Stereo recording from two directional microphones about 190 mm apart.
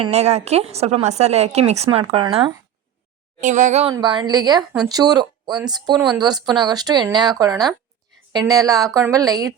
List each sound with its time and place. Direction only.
0.0 s speech: 35° right (ahead or behind)
3.4 s speech: 40° right (ahead or behind)
3.9 s a woman's voice: 25° right (ahead or behind)